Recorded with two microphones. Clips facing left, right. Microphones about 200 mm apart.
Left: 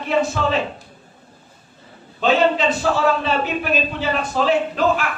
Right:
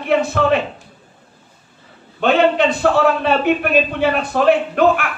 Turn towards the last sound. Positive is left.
turn(degrees=-60)  # may be behind; listen again after turning